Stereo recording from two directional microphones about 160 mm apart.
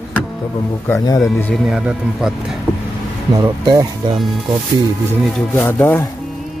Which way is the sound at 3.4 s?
25° right (ahead or behind).